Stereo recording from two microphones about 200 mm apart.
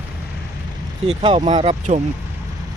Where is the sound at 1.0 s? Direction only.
25° right (ahead or behind).